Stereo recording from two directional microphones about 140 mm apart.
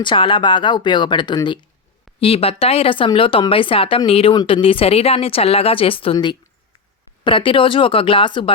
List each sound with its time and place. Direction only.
0.0 s speech: 35° left (ahead or behind)
2.2 s speech: 45° left (ahead or behind)